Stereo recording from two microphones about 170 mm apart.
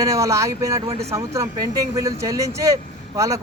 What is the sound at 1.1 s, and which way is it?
Speech, 20° right (ahead or behind).